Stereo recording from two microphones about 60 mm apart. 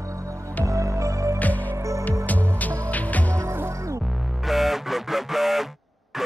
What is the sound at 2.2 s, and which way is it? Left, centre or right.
Music, left.